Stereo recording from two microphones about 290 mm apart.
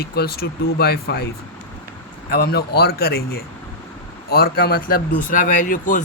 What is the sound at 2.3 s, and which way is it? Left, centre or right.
Speech, left.